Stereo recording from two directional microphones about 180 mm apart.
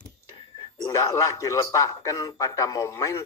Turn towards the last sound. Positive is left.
turn(degrees=15)  # may be behind; listen again after turning